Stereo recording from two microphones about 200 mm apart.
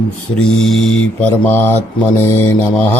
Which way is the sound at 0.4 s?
Centre (ahead or behind).